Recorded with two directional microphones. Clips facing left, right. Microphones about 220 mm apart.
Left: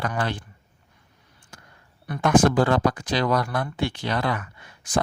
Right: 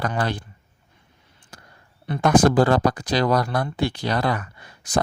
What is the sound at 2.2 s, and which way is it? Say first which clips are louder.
Speech: right 2 dB; 40° right (ahead or behind).